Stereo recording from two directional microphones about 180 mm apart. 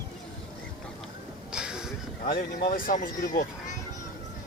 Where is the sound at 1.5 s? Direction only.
5° right (ahead or behind).